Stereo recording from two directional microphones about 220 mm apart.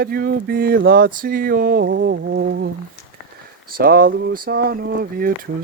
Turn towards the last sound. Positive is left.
turn(degrees=-40)  # may be behind; listen again after turning